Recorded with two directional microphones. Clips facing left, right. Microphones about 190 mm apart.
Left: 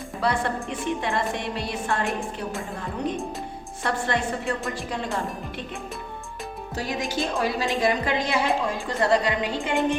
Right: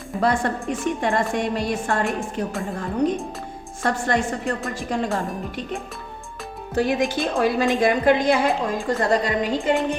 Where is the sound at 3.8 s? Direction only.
45° right (ahead or behind).